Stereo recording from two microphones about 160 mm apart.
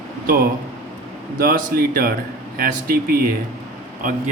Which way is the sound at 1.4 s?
65° right (ahead or behind).